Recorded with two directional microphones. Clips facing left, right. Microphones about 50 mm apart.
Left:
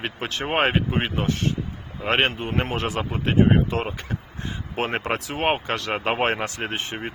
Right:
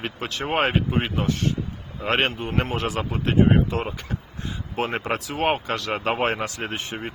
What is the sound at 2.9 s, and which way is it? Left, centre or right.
Speech, centre.